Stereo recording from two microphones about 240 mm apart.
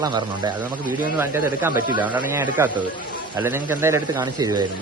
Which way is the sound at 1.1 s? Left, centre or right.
Centre.